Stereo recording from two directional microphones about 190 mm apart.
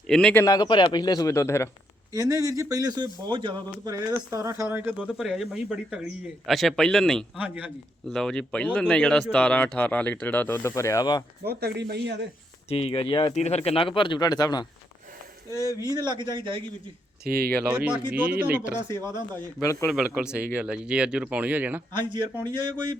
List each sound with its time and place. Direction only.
0.1 s a man's voice: 5° left (ahead or behind)
0.4 s speech: 20° left (ahead or behind)
2.1 s a man's voice: 15° right (ahead or behind); by 7.3 s 5° left (ahead or behind)
7.3 s speech: 5° right (ahead or behind)
8.1 s speech: 5° left (ahead or behind); by 11.2 s 20° left (ahead or behind)
11.4 s speech: 60° right (ahead or behind)
12.6 s speech: 30° left (ahead or behind)
15.9 s a man's voice: 20° right (ahead or behind)
17.2 s speech: 55° right (ahead or behind)
17.7 s speech: 5° right (ahead or behind)
19.9 s a man's voice: 5° right (ahead or behind)
22.4 s a man's voice: 25° right (ahead or behind)